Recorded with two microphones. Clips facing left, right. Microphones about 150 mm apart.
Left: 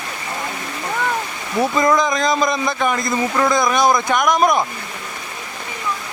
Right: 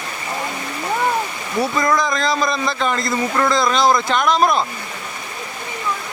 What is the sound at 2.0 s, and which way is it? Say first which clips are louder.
A man's voice: left 2 dB; 15° left (ahead or behind).